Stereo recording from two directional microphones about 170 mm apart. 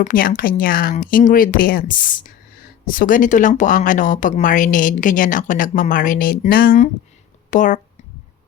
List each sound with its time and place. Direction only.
0.0 s speech: 55° left (ahead or behind)